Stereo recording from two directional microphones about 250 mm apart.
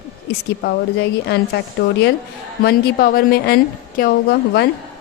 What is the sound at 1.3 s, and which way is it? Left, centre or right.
A woman's voice, left.